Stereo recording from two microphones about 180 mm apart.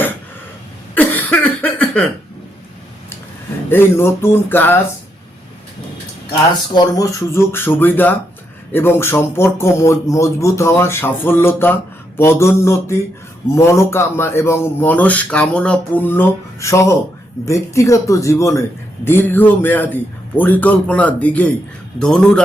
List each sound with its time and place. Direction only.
0.9 s cough: 10° left (ahead or behind)
3.7 s speech: 10° left (ahead or behind)
6.7 s speech: 20° left (ahead or behind); by 22.4 s 5° left (ahead or behind)